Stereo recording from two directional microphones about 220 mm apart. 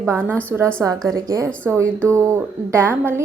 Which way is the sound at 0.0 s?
10° right (ahead or behind).